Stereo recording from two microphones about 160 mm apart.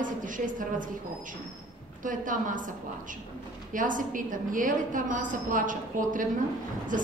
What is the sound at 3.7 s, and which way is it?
A woman's voice, 55° right (ahead or behind).